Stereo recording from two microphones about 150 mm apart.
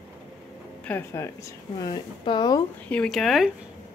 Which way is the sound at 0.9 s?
15° left (ahead or behind).